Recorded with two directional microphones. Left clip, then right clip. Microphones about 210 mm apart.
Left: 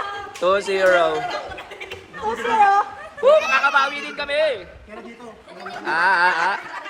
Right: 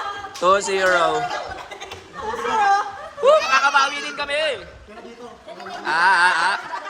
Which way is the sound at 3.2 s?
15° right (ahead or behind).